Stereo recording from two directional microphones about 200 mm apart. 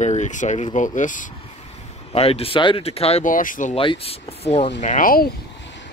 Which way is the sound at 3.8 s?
25° left (ahead or behind).